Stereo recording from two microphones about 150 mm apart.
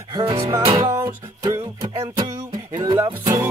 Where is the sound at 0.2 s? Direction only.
40° right (ahead or behind).